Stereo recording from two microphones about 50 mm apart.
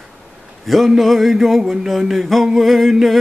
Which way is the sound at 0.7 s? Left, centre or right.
Centre.